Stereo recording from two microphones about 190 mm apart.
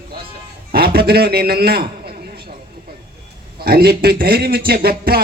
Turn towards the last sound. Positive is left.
turn(degrees=-55)  # may be behind; listen again after turning